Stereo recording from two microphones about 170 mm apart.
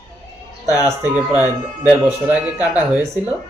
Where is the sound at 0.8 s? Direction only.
15° right (ahead or behind).